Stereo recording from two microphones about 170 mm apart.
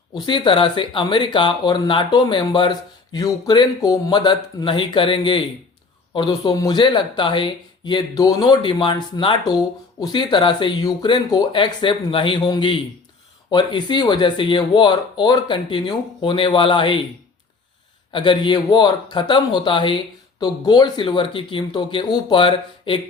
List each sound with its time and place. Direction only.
0.1 s speech: 25° left (ahead or behind)
18.1 s speech: 30° left (ahead or behind)